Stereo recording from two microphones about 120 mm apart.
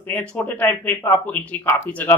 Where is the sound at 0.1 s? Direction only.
15° left (ahead or behind).